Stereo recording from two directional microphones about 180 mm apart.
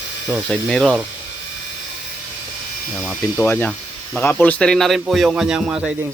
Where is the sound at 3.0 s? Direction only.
10° left (ahead or behind).